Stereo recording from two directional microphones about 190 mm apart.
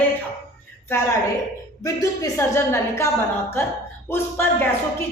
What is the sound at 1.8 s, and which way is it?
A woman's voice, 20° left (ahead or behind).